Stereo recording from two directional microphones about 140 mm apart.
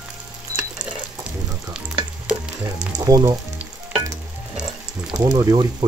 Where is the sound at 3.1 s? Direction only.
25° right (ahead or behind).